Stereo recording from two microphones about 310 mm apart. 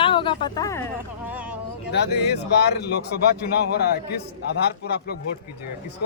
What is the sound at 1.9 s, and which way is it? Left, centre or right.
Speech, left.